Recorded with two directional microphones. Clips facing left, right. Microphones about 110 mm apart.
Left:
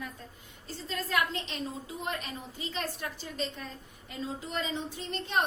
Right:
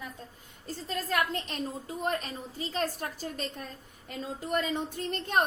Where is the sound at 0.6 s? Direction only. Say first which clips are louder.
Right 2 dB; 45° right (ahead or behind).